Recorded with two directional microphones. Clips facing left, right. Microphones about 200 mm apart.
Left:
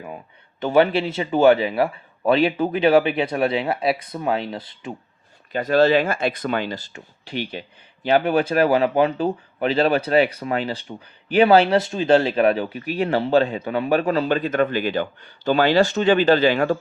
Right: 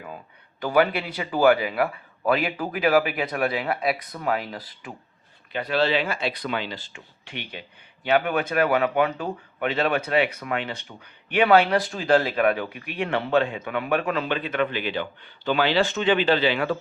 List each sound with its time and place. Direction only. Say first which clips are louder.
0.6 s a man's voice: left 4 dB; 25° left (ahead or behind)
5.5 s speech: left 7 dB; 45° left (ahead or behind)